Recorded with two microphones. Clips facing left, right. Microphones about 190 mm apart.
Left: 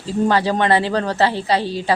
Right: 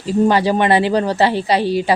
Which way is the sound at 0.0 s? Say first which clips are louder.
Right 3 dB; 15° right (ahead or behind).